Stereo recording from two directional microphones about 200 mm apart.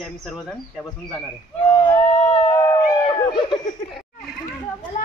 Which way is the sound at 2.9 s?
20° left (ahead or behind).